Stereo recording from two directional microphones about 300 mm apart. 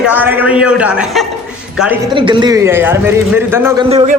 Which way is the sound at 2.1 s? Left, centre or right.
Centre.